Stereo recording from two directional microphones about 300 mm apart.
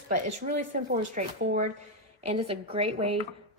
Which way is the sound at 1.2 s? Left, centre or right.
Right.